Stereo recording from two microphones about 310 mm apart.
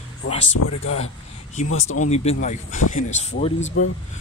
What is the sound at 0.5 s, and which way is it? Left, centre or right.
Speech, left.